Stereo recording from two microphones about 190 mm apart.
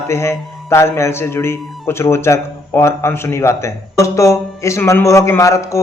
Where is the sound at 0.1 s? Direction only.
15° left (ahead or behind).